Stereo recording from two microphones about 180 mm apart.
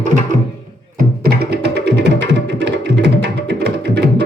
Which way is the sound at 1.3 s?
65° right (ahead or behind).